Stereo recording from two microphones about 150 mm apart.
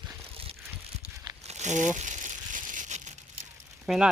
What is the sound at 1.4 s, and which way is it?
Crumpling, 50° right (ahead or behind).